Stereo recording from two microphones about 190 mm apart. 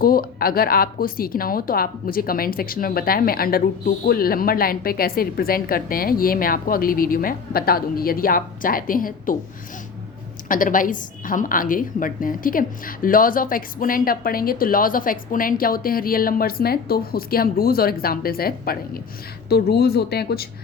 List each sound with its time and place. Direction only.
0.0 s speech: 50° left (ahead or behind)
10.5 s speech: 45° left (ahead or behind)